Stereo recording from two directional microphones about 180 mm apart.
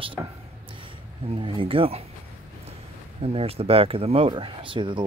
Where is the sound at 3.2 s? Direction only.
35° right (ahead or behind).